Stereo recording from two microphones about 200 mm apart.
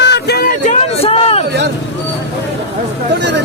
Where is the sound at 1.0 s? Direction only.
30° left (ahead or behind).